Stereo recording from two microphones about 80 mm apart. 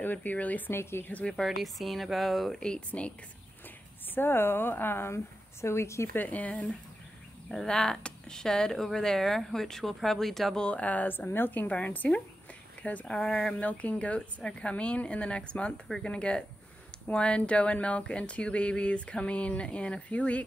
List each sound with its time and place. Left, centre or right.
0.0 s a woman's voice: left
1.3 s speech: centre
4.1 s a woman's voice: left
6.1 s a woman's voice: centre
13.1 s speech: centre